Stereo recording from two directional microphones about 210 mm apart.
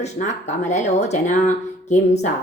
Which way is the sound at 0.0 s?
35° left (ahead or behind).